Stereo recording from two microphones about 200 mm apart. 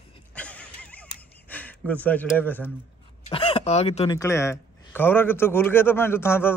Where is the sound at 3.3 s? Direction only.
25° left (ahead or behind).